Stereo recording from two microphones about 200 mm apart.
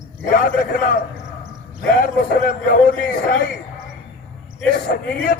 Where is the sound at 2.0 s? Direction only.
45° left (ahead or behind).